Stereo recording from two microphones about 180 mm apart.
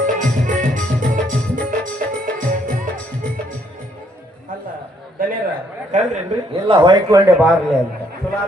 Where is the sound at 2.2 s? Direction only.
50° right (ahead or behind).